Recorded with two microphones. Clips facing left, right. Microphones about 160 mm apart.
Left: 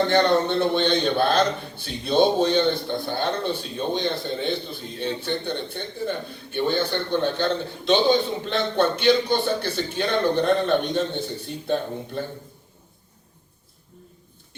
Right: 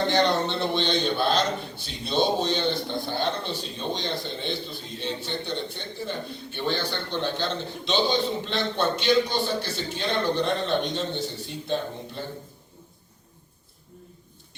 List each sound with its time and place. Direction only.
0.1 s a man's voice: 55° left (ahead or behind)